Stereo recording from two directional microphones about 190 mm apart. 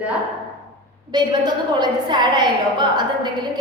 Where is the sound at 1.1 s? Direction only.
20° right (ahead or behind).